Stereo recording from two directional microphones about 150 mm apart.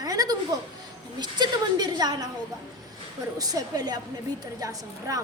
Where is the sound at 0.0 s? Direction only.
25° right (ahead or behind).